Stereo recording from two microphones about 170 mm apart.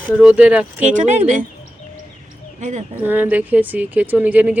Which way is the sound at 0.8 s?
45° right (ahead or behind).